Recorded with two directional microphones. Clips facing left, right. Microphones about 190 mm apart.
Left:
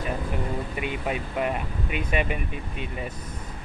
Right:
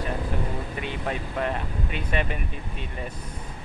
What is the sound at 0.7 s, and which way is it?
Speech, 10° left (ahead or behind).